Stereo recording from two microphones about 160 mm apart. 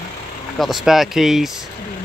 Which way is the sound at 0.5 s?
Centre (ahead or behind).